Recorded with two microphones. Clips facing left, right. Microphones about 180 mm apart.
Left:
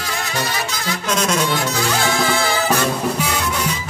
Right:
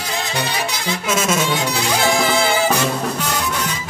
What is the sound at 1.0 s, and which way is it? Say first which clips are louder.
Music: even; 5° right (ahead or behind).